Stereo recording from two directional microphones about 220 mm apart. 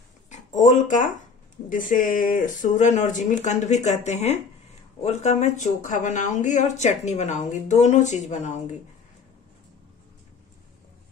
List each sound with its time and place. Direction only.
0.3 s speech: 30° left (ahead or behind)